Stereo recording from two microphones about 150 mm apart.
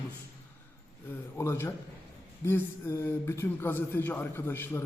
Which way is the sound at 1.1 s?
15° left (ahead or behind).